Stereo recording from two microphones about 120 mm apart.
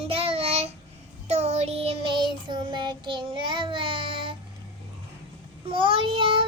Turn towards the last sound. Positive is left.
turn(degrees=-45)  # may be behind; listen again after turning